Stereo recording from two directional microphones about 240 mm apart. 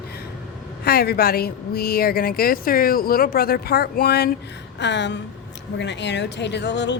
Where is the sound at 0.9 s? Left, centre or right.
Left.